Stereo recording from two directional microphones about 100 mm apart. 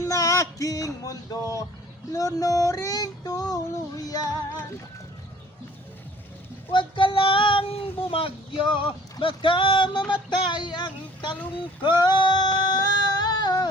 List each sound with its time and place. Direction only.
0.0 s music: 30° left (ahead or behind)
2.1 s a sound: 35° left (ahead or behind)
6.7 s speech: 55° left (ahead or behind)
11.8 s female singing: 50° left (ahead or behind)